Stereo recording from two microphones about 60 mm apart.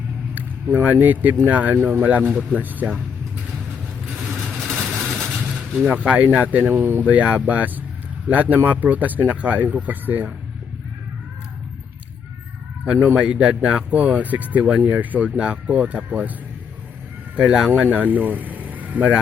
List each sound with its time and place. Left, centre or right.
0.3 s a sound: right
0.9 s speech: right
4.5 s vehicle: centre
5.9 s speech: right
7.1 s speech: right
12.8 s speech: centre
17.3 s speech: centre